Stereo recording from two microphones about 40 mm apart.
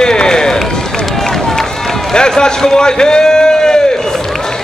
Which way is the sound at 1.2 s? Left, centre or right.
Centre.